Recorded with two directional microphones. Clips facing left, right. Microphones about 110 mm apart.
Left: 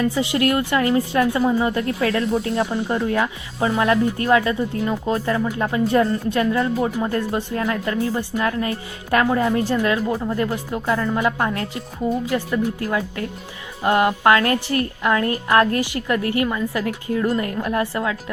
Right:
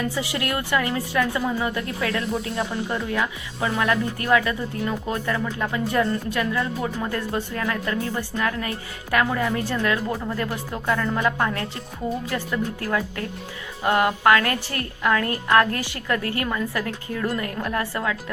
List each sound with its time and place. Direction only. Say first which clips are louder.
0.2 s a woman's voice: left 7 dB; 25° left (ahead or behind)
9.5 s a woman's voice: left 4 dB; 20° left (ahead or behind)